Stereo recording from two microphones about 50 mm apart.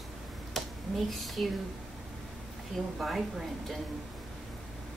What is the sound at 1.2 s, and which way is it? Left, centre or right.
Speech, centre.